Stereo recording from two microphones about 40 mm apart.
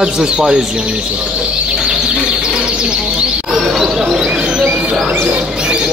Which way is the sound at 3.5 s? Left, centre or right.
Centre.